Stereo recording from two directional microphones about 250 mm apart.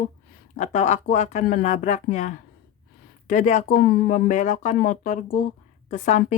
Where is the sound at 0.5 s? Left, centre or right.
Left.